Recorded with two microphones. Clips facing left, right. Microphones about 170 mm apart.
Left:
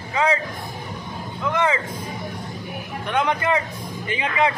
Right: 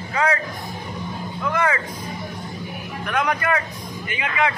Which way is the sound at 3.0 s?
25° left (ahead or behind).